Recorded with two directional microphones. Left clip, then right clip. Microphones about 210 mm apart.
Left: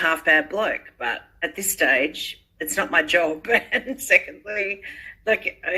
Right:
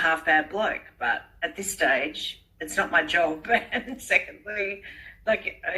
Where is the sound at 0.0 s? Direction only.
45° left (ahead or behind).